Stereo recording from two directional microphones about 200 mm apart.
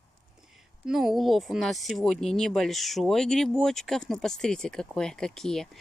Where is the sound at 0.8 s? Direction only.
Centre (ahead or behind).